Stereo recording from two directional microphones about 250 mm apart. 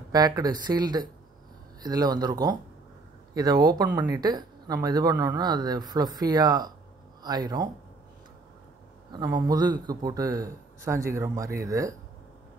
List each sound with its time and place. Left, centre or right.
0.1 s speech: centre
9.1 s speech: centre